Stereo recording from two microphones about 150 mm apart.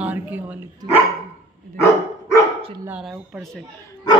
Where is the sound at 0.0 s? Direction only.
10° right (ahead or behind).